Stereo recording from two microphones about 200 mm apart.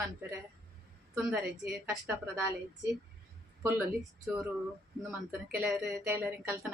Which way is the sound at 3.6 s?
5° right (ahead or behind).